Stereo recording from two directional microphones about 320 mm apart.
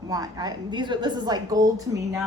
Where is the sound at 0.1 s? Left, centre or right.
Centre.